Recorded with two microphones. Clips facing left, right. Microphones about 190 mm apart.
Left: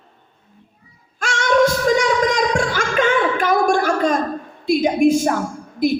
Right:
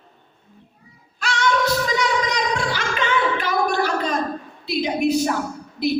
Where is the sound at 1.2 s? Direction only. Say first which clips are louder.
Left 5 dB; 45° left (ahead or behind).